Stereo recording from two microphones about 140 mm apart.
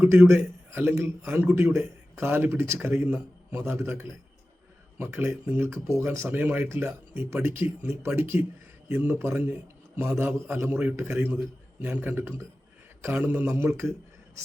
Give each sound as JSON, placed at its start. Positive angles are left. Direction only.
{"t": 0.0, "sound": "a man's voice", "side_deg": -15}